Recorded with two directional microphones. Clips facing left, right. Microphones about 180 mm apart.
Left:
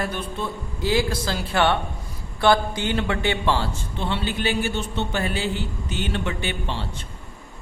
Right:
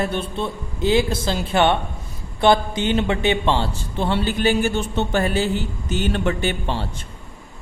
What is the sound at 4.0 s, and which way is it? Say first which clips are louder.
A man's voice: right 5 dB; 40° right (ahead or behind).